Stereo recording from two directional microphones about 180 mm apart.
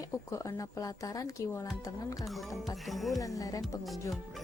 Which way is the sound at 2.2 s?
Centre (ahead or behind).